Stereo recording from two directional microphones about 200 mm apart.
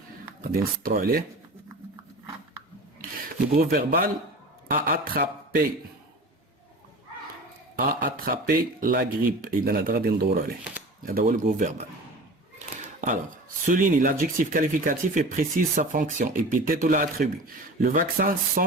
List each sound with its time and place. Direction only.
0.5 s speech: 45° right (ahead or behind)
3.5 s speech: 45° right (ahead or behind)
7.8 s speech: 45° right (ahead or behind)
13.7 s speech: 40° right (ahead or behind)